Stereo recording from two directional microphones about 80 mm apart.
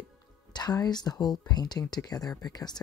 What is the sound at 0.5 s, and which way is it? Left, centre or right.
Speech, left.